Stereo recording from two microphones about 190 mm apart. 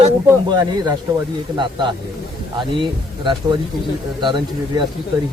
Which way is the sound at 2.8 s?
25° right (ahead or behind).